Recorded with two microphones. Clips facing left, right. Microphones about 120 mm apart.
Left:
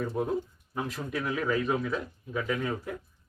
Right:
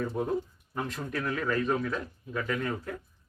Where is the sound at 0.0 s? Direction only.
5° left (ahead or behind).